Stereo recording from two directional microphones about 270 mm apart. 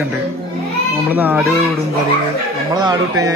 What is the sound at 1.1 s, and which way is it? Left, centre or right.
Speech, centre.